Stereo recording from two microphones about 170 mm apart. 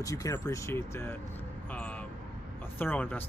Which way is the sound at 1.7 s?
10° left (ahead or behind).